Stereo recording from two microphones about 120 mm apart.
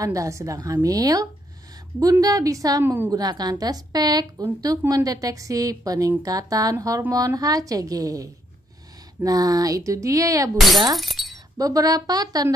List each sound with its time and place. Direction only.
0.0 s speech: 25° right (ahead or behind)
2.8 s a woman's voice: 15° right (ahead or behind)
3.1 s a woman's voice: 35° right (ahead or behind)
11.0 s speech: centre (ahead or behind)
11.5 s a woman's voice: 30° right (ahead or behind)